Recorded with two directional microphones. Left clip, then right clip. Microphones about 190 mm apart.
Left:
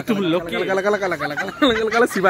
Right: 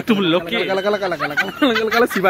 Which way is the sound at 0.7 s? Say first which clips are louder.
Right 1 dB; 20° left (ahead or behind).